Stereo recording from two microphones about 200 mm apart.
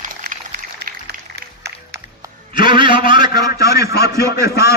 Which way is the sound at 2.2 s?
25° right (ahead or behind).